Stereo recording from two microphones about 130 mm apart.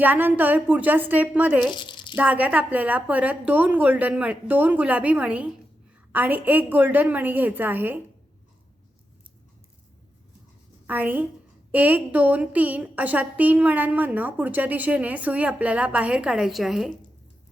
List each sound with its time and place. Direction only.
0.0 s a woman's voice: 15° right (ahead or behind)
1.7 s a sound: 35° left (ahead or behind)
2.1 s a woman's voice: 10° right (ahead or behind)
10.8 s a woman's voice: 15° right (ahead or behind)